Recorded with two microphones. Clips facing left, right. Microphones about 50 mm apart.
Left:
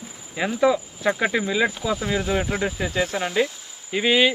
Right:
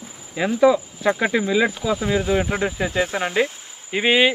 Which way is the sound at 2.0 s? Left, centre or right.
Centre.